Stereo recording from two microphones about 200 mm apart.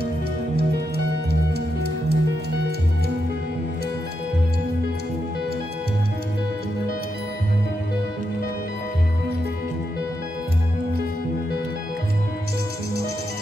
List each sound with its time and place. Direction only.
0.6 s music: 55° right (ahead or behind)